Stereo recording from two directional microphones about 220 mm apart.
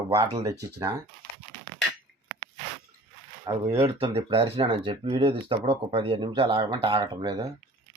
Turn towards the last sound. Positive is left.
turn(degrees=-20)  # may be behind; listen again after turning